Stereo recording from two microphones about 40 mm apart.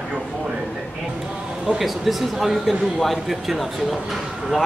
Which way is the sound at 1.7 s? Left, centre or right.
Centre.